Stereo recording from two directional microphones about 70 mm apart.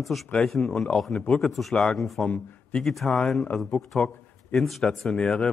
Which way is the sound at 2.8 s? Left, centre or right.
Centre.